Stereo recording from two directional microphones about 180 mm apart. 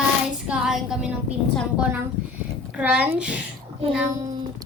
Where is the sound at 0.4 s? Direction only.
5° right (ahead or behind).